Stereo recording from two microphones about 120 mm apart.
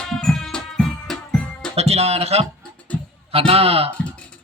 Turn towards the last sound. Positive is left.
turn(degrees=-55)  # may be behind; listen again after turning